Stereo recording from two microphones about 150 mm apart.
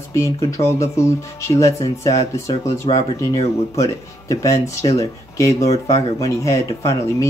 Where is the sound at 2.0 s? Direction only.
20° left (ahead or behind).